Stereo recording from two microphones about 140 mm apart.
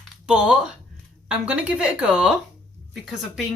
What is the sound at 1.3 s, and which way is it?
Speech, 10° right (ahead or behind).